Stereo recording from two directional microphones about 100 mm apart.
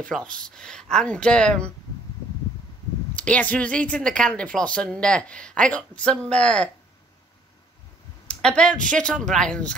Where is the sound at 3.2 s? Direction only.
15° left (ahead or behind).